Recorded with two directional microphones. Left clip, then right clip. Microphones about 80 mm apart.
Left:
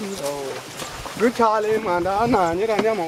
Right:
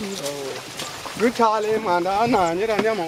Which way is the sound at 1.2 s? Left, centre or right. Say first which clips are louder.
Left 1 dB; right.